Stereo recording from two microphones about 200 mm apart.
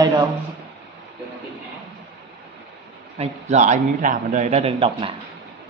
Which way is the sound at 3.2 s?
30° right (ahead or behind).